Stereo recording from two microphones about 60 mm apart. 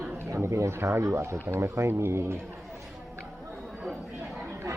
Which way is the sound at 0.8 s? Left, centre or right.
Right.